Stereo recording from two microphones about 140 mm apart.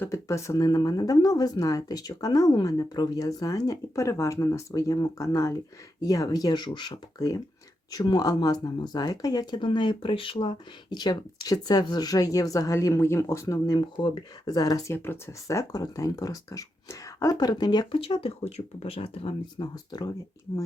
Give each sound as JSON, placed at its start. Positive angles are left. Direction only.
{"t": 0.0, "sound": "speech", "side_deg": 20}
{"t": 18.0, "sound": "speech", "side_deg": 45}
{"t": 19.7, "sound": "speech", "side_deg": 30}